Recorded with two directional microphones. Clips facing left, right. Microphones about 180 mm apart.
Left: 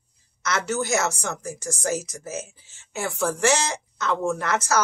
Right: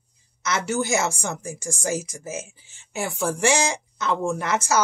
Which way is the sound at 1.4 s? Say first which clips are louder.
Even; 10° right (ahead or behind).